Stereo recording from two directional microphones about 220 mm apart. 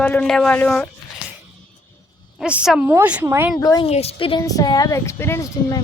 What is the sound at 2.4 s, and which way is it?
A woman's voice, 5° right (ahead or behind).